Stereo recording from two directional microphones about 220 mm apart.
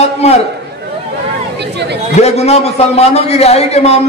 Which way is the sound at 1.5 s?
50° right (ahead or behind).